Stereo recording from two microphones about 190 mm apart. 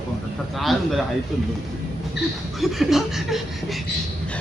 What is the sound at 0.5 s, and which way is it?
Speech, centre (ahead or behind).